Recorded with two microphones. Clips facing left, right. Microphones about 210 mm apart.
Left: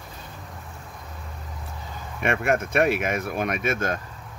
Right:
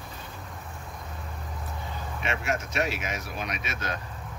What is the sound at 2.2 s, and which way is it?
Speech, 55° left (ahead or behind).